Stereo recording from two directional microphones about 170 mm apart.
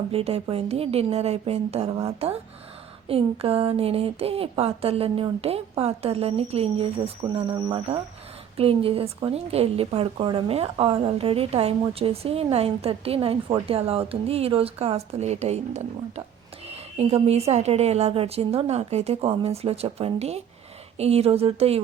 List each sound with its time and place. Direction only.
0.1 s a woman's voice: 35° right (ahead or behind)